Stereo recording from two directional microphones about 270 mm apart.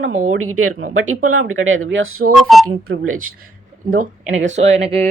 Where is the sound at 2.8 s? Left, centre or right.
Right.